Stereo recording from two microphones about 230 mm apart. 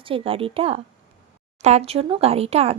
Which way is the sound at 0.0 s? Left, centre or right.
Right.